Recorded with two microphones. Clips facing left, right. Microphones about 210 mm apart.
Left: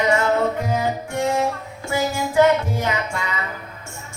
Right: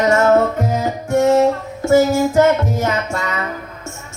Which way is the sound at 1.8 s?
45° right (ahead or behind).